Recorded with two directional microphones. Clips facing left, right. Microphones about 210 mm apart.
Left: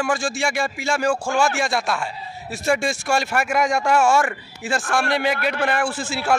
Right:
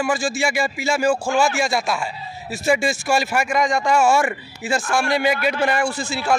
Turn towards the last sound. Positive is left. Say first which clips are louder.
# right 1 dB
turn(degrees=5)  # may be behind; listen again after turning